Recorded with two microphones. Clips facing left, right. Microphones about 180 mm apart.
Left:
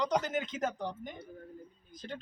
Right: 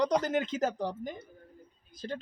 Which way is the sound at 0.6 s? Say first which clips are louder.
Right 4 dB; 35° right (ahead or behind).